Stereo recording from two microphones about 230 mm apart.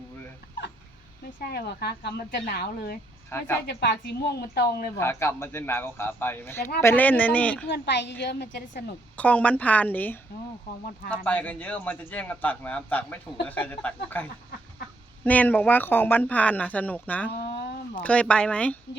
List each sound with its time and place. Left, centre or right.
1.4 s speech: left
3.2 s speech: centre
3.7 s speech: left
4.9 s speech: centre
7.7 s speech: left
9.1 s speech: centre
17.4 s a sound: left
18.0 s speech: centre